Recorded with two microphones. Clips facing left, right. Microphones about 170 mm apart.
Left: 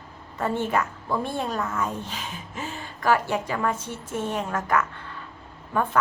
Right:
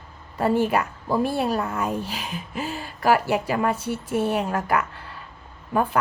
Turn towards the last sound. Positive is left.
turn(degrees=-10)  # may be behind; listen again after turning